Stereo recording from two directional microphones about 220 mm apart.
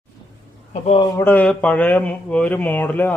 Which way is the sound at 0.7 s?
30° left (ahead or behind).